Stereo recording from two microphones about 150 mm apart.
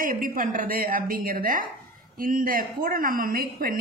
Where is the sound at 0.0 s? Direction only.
70° right (ahead or behind).